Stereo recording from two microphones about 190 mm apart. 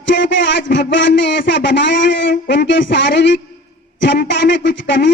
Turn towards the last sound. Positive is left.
turn(degrees=70)  # may be behind; listen again after turning